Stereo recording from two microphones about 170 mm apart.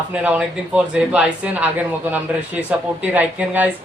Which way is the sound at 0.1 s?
5° right (ahead or behind).